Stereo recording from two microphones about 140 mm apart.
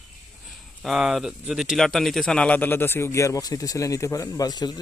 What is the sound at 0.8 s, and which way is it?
Speech, centre (ahead or behind).